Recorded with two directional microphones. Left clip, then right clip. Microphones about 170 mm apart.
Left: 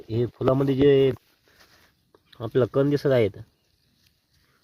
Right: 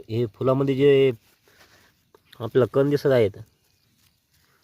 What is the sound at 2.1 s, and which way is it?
Speech, 20° right (ahead or behind).